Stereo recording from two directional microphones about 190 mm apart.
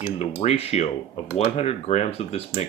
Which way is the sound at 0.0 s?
35° left (ahead or behind).